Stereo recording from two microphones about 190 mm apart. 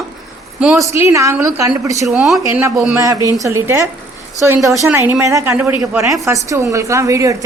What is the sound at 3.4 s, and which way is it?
A woman's voice, 15° right (ahead or behind).